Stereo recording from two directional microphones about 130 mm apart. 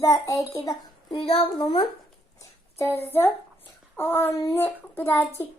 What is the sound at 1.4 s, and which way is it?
Speech, 45° left (ahead or behind).